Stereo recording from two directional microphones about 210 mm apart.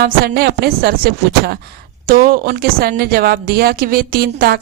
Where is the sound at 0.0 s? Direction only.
50° right (ahead or behind).